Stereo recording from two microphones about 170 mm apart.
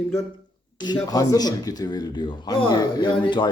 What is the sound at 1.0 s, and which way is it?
A man's voice, 20° left (ahead or behind).